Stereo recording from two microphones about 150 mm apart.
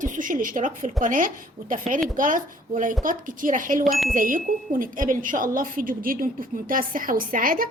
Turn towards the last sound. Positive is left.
turn(degrees=-70)  # may be behind; listen again after turning